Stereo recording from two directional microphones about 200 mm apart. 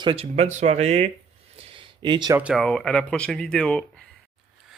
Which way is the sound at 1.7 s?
25° right (ahead or behind).